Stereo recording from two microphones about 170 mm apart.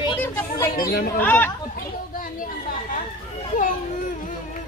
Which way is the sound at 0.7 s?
60° left (ahead or behind).